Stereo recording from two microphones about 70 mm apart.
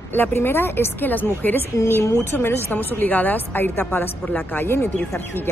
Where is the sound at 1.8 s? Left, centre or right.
Left.